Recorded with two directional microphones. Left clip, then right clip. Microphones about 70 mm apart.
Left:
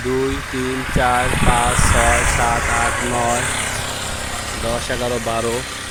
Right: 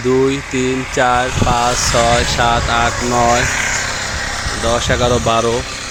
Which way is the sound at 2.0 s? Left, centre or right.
Right.